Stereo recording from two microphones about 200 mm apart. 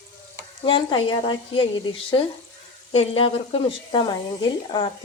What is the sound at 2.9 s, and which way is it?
Speech, 30° left (ahead or behind).